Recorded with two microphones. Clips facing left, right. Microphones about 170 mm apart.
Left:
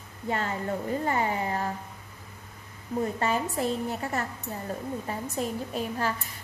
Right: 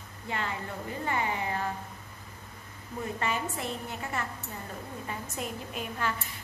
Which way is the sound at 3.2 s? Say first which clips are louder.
Left 5 dB; 40° left (ahead or behind).